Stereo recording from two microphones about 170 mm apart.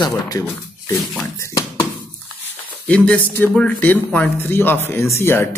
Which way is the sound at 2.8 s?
5° left (ahead or behind).